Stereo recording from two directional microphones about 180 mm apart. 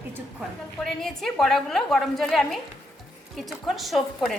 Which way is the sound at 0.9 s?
Centre (ahead or behind).